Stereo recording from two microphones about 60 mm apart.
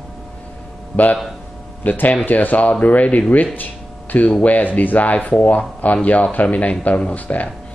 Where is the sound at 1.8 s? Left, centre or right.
Left.